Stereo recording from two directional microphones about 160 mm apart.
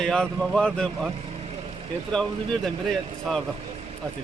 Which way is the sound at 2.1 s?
5° left (ahead or behind).